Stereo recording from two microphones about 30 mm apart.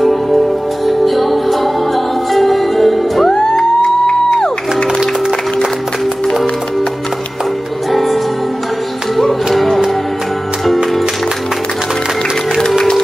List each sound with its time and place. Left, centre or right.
0.0 s music: centre
3.3 s music: left
7.9 s music: centre
9.5 s music: centre